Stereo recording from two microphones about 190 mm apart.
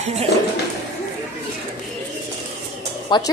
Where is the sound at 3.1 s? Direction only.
25° left (ahead or behind).